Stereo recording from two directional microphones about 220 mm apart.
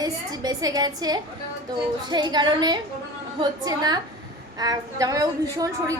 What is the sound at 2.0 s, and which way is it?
A woman's voice, 20° right (ahead or behind).